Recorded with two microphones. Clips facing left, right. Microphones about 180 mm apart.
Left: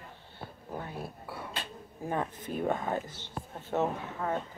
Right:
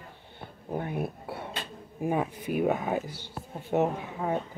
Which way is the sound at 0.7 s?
20° right (ahead or behind).